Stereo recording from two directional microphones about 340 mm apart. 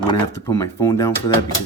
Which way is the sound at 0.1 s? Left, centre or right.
Centre.